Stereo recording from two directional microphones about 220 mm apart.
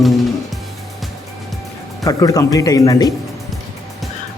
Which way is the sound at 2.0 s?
15° left (ahead or behind).